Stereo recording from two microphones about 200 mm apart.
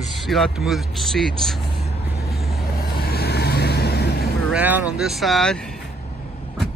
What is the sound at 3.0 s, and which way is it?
Vehicle, 50° left (ahead or behind).